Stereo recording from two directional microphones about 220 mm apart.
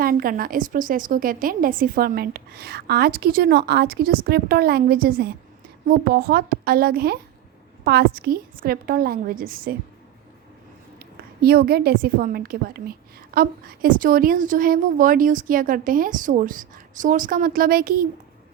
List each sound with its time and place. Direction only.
0.0 s a woman's voice: 40° right (ahead or behind)
11.0 s a woman's voice: 45° right (ahead or behind)